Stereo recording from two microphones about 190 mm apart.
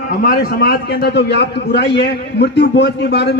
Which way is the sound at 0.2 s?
50° left (ahead or behind).